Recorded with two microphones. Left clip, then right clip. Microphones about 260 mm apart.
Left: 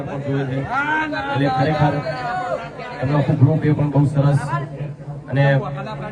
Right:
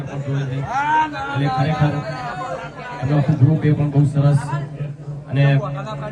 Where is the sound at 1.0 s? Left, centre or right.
Centre.